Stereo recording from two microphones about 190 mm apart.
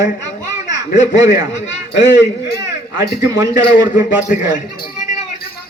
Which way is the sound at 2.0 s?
70° left (ahead or behind).